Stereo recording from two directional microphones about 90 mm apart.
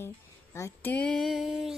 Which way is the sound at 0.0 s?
30° left (ahead or behind).